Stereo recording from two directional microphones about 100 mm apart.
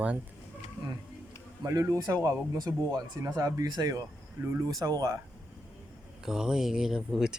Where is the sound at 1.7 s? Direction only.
30° right (ahead or behind).